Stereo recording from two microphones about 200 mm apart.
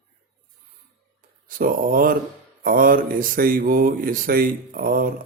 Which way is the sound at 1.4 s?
45° right (ahead or behind).